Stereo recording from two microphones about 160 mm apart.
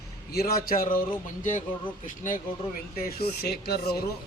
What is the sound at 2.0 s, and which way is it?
Speech, 55° left (ahead or behind).